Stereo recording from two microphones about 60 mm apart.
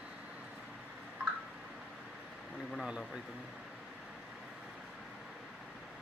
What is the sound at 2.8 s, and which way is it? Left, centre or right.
Speech, centre.